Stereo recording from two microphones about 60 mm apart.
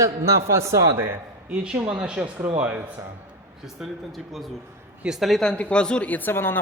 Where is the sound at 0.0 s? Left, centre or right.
Right.